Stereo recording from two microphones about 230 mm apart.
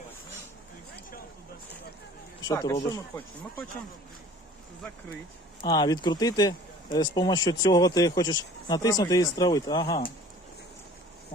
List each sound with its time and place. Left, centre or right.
2.5 s speech: centre
5.6 s speech: centre